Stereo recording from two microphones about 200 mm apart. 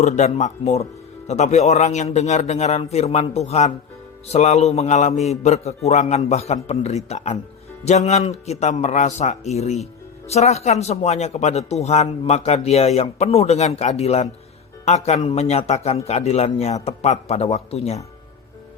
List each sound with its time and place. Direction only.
0.0 s a man's voice: 35° left (ahead or behind)